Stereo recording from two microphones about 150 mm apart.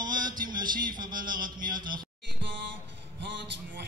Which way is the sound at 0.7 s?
70° right (ahead or behind).